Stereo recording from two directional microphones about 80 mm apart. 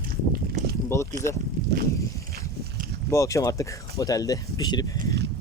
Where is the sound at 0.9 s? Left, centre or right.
Left.